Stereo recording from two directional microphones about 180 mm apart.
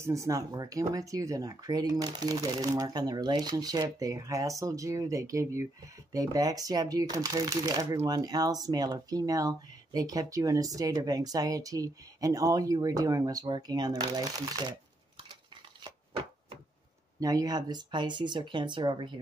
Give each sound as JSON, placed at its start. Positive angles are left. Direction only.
{"t": 0.0, "sound": "speech", "side_deg": -15}
{"t": 17.2, "sound": "speech", "side_deg": -20}